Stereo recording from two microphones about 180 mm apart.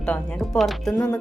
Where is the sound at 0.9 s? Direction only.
20° left (ahead or behind).